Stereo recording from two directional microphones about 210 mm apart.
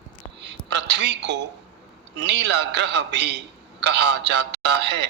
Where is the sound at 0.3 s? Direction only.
55° right (ahead or behind).